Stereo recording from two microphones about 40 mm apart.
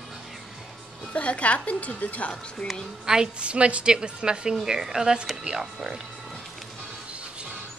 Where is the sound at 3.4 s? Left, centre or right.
Right; by 6.0 s centre.